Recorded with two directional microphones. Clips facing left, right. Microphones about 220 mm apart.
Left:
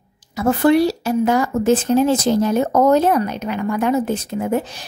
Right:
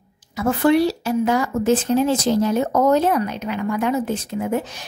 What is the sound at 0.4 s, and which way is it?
A woman's voice, 40° left (ahead or behind).